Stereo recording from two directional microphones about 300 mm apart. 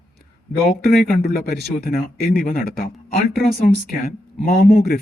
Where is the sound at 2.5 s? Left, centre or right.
Left.